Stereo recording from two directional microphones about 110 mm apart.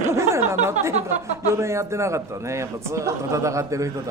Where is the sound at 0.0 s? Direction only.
25° right (ahead or behind).